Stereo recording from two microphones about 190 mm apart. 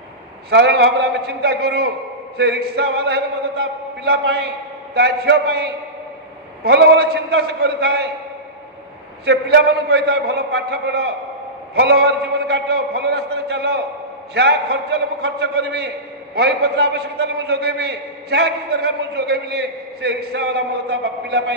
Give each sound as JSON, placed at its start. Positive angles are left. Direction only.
{"t": 0.5, "sound": "a man's voice", "side_deg": -60}
{"t": 9.2, "sound": "a man's voice", "side_deg": -60}